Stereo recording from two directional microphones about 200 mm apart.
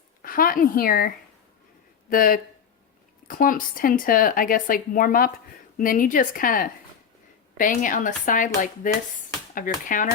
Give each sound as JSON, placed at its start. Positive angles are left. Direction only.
{"t": 0.2, "sound": "speech", "side_deg": 45}